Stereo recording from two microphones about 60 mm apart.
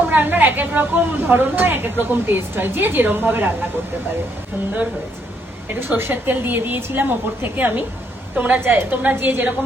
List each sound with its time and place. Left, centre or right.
0.1 s a woman's voice: right
6.0 s a woman's voice: right